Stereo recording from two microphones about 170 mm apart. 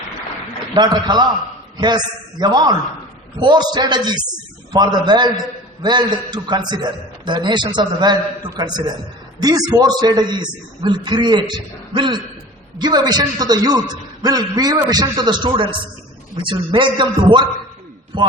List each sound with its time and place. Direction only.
0.7 s a man's voice: 25° right (ahead or behind)